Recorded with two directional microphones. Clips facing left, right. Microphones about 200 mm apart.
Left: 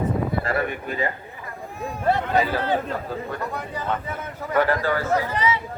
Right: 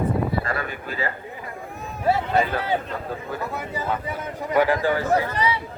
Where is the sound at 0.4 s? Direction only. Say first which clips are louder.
Left 4 dB; 20° left (ahead or behind).